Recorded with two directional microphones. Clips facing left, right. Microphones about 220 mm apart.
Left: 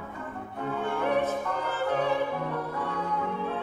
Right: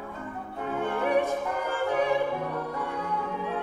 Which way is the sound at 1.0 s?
15° right (ahead or behind).